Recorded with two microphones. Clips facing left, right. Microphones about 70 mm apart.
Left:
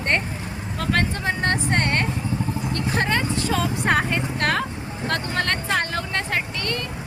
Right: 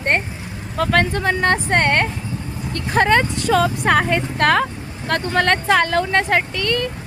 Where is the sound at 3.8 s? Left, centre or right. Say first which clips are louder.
Right 4 dB; right.